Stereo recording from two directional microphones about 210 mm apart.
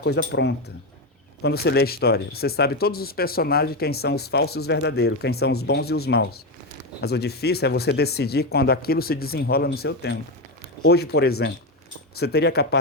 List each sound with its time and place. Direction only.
0.0 s speech: 50° left (ahead or behind)